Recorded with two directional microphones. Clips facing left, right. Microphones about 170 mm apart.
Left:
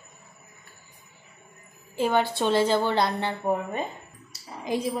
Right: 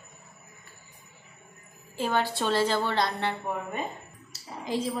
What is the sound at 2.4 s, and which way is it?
A woman's voice, 25° left (ahead or behind).